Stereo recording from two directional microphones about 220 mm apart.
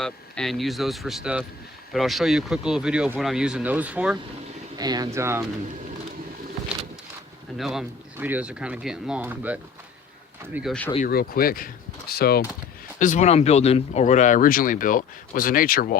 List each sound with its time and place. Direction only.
0.0 s speech: centre (ahead or behind)
4.8 s speech: 15° right (ahead or behind)
7.6 s speech: centre (ahead or behind)
10.9 s speech: 40° left (ahead or behind)